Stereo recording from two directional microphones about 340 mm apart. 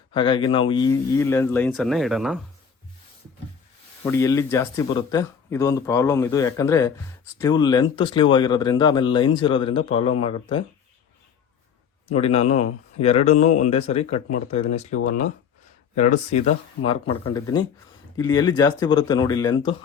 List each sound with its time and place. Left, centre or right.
0.1 s speech: centre
4.0 s speech: centre
12.1 s speech: centre